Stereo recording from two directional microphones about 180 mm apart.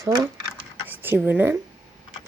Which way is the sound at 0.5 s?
10° right (ahead or behind).